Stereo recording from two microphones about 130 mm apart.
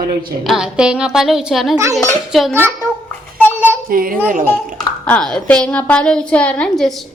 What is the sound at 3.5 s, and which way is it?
Child singing, 15° right (ahead or behind).